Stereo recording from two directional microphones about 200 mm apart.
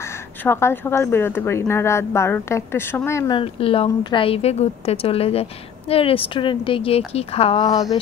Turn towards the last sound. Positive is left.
turn(degrees=20)  # may be behind; listen again after turning